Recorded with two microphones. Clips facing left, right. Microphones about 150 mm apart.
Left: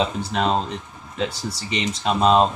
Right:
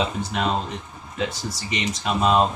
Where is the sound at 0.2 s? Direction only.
30° left (ahead or behind).